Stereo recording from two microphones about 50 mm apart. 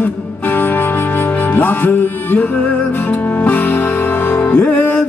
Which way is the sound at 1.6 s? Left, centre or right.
Left.